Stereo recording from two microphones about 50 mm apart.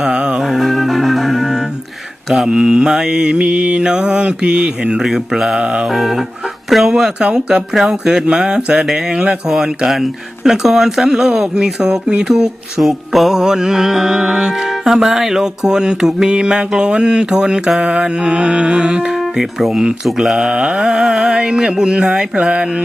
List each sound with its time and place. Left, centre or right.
0.0 s music: centre
0.4 s music: centre
5.0 s music: centre
5.5 s mantra: centre
5.9 s music: centre
12.8 s music: centre
19.1 s speech: centre
20.1 s music: centre
20.3 s music: centre